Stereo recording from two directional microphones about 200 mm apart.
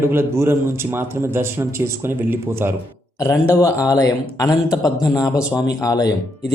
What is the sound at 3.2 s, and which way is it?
A man's voice, 15° left (ahead or behind).